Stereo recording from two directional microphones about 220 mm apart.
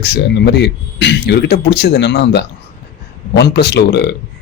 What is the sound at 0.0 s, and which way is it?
Speech, 50° left (ahead or behind).